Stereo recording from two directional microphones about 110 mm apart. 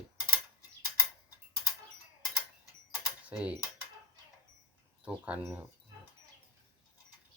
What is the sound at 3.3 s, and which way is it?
Mechanisms, 10° right (ahead or behind).